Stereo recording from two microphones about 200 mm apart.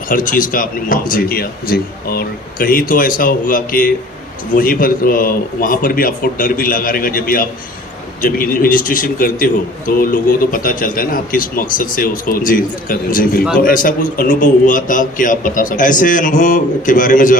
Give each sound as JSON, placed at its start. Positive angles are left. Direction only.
{"t": 0.1, "sound": "a man's voice", "side_deg": 40}